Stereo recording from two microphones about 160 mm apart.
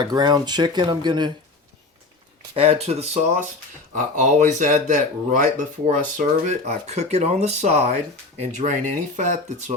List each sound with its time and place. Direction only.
0.0 s speech: 25° right (ahead or behind)
2.6 s speech: 40° right (ahead or behind)
3.9 s speech: 55° right (ahead or behind)